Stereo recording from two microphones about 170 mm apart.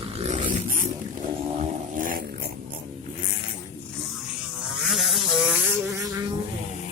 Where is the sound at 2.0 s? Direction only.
55° right (ahead or behind).